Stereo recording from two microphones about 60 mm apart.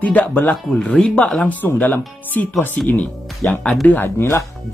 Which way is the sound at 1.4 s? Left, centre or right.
Left.